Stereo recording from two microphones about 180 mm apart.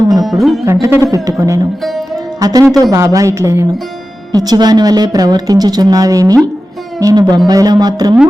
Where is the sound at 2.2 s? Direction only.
20° right (ahead or behind).